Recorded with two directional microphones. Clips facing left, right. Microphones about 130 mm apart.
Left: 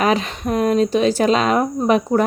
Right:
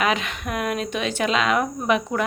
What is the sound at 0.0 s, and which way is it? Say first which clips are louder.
Speech: left 5 dB; 35° left (ahead or behind).